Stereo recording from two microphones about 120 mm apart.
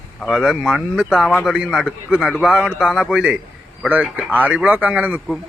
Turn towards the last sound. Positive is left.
turn(degrees=-15)  # may be behind; listen again after turning